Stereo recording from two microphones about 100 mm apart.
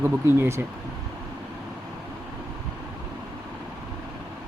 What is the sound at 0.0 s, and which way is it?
Speech, 25° right (ahead or behind).